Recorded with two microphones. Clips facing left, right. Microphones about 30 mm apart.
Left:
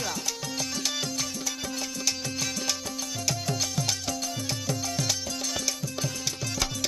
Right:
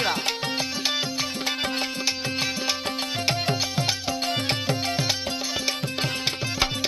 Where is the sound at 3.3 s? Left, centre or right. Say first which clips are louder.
Right 4 dB; right.